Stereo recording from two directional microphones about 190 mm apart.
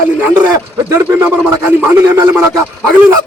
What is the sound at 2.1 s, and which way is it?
Speech, 10° right (ahead or behind).